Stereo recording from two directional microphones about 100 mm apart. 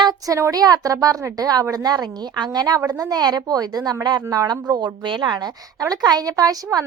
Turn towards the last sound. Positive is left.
turn(degrees=-40)  # may be behind; listen again after turning